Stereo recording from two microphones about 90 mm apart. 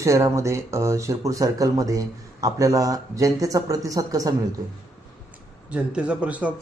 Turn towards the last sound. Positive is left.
turn(degrees=-15)  # may be behind; listen again after turning